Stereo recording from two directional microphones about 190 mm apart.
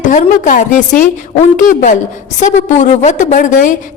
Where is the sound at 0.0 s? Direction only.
40° left (ahead or behind).